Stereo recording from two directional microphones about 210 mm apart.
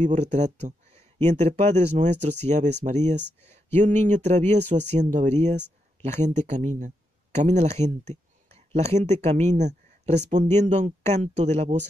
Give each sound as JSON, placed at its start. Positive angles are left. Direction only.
{"t": 0.0, "sound": "speech", "side_deg": -35}